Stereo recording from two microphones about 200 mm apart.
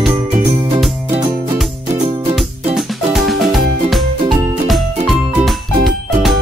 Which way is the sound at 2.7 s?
Centre (ahead or behind).